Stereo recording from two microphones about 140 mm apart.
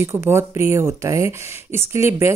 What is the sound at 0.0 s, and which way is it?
A woman's voice, 20° right (ahead or behind).